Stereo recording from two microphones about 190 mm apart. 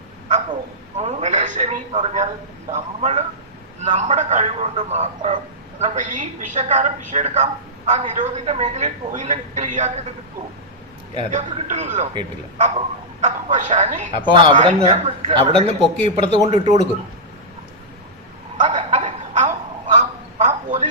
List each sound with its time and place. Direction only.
0.9 s a man's voice: 35° right (ahead or behind)
11.3 s a man's voice: 40° right (ahead or behind)
14.1 s speech: 25° right (ahead or behind)
14.5 s a man's voice: 35° right (ahead or behind)
18.5 s a sound: 35° right (ahead or behind)